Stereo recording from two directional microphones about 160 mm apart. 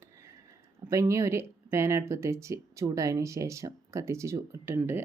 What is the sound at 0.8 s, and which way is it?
Speech, 20° right (ahead or behind).